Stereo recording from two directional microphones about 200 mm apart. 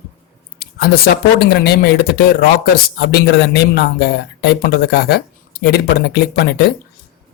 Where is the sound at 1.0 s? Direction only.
55° left (ahead or behind).